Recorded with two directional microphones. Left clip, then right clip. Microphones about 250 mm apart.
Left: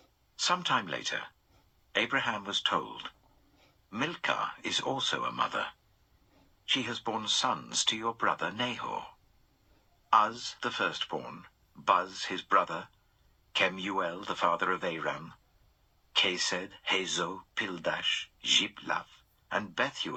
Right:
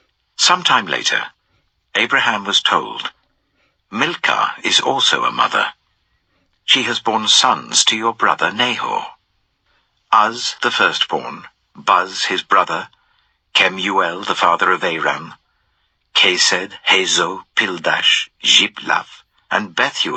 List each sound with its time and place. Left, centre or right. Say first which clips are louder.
0.3 s speech: right 16 dB; right